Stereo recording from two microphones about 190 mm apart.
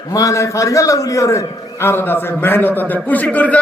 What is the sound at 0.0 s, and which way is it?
A man's voice, 20° left (ahead or behind).